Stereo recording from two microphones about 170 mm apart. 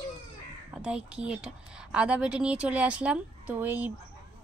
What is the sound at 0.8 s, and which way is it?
A woman's voice, 5° right (ahead or behind).